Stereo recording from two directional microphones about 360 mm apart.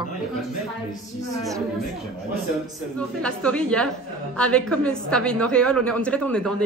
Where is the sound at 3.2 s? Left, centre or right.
Centre.